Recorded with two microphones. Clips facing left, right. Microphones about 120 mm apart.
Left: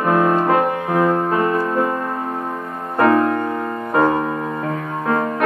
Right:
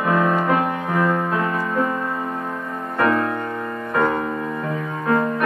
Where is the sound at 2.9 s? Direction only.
30° left (ahead or behind).